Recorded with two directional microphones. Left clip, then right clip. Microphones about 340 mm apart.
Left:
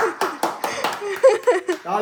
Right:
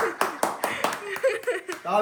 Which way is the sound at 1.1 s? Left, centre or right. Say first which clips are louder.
Left 13 dB; centre.